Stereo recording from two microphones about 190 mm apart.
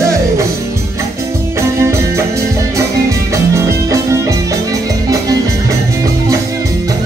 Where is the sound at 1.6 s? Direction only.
15° right (ahead or behind).